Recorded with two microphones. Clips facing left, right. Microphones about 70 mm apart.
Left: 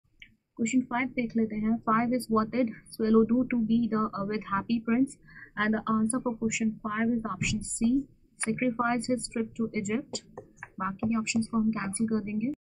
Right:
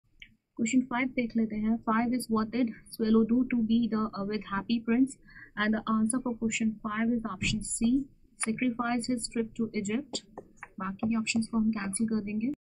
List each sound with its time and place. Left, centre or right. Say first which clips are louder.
0.6 s speech: even; centre